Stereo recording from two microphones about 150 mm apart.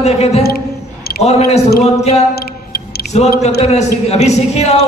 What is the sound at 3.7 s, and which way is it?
A woman's voice, 45° left (ahead or behind).